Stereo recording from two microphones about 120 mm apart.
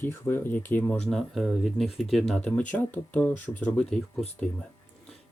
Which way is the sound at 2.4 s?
10° left (ahead or behind).